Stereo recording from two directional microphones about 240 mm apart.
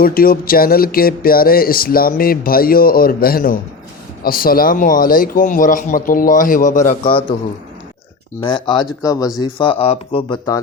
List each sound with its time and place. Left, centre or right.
0.0 s speech: left
8.4 s speech: centre